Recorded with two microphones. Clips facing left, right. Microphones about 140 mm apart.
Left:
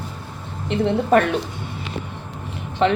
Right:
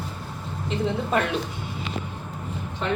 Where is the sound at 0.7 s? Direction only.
65° left (ahead or behind).